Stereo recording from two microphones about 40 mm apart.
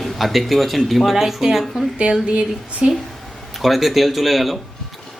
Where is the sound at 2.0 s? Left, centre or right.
Right.